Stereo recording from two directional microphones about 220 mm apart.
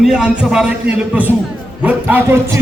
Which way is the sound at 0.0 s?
5° right (ahead or behind).